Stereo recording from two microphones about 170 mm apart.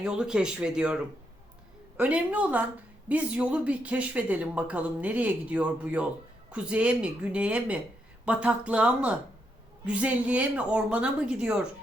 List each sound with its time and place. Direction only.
0.0 s speech: 5° right (ahead or behind)